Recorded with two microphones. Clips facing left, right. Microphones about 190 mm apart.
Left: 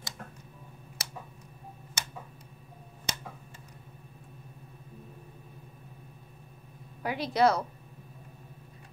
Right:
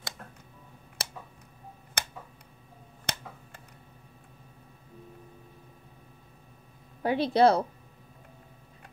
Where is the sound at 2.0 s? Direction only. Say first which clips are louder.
Right 4 dB; 60° right (ahead or behind).